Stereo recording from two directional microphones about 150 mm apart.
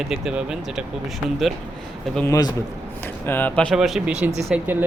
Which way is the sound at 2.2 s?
25° left (ahead or behind).